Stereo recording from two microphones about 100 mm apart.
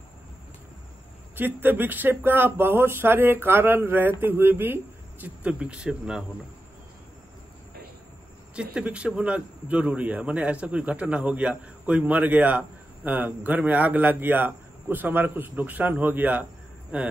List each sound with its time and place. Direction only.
1.3 s a man's voice: 20° right (ahead or behind)
8.5 s a man's voice: 10° right (ahead or behind)